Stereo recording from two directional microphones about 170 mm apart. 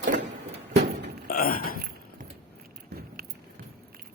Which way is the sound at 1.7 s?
65° right (ahead or behind).